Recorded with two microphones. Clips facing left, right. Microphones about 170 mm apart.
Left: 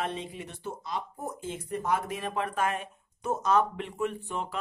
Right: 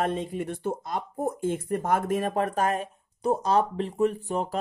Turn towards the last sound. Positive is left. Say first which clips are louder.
# right 6 dB
turn(degrees=-40)  # may be behind; listen again after turning